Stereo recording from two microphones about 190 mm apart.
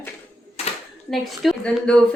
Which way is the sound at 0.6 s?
35° left (ahead or behind).